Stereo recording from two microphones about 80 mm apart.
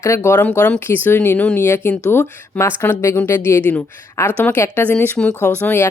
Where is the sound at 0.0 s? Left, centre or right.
Left.